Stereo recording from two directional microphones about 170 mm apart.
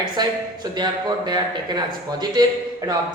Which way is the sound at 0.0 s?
25° right (ahead or behind).